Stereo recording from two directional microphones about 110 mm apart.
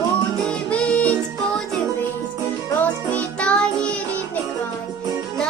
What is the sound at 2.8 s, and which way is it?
Music, 15° left (ahead or behind).